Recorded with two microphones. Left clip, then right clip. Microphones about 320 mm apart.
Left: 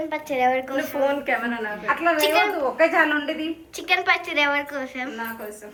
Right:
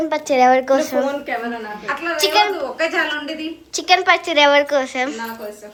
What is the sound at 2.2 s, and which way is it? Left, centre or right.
Speech, centre.